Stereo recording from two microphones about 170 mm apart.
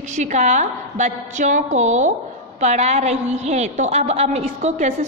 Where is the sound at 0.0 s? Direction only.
45° right (ahead or behind).